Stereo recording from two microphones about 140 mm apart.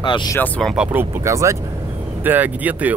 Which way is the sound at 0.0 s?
35° left (ahead or behind).